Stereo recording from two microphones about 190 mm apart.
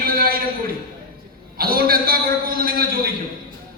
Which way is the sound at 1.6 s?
50° right (ahead or behind).